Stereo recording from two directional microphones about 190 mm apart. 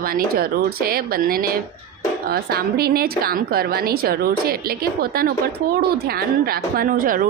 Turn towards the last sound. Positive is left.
turn(degrees=-45)  # may be behind; listen again after turning